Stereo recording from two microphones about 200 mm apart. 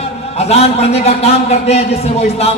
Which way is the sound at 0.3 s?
30° left (ahead or behind).